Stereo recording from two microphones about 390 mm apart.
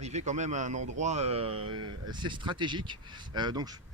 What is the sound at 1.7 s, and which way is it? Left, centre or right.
Speech, right.